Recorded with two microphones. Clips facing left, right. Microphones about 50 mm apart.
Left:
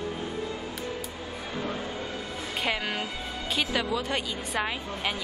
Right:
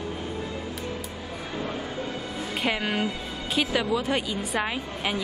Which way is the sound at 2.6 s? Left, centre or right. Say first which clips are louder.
Right 3 dB; centre.